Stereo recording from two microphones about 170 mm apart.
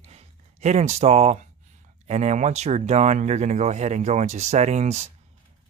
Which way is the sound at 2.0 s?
40° right (ahead or behind).